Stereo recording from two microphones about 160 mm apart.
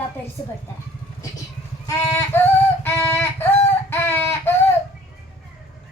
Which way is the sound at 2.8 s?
15° left (ahead or behind).